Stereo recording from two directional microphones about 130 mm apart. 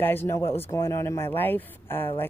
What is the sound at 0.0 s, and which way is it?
Speech, 15° left (ahead or behind).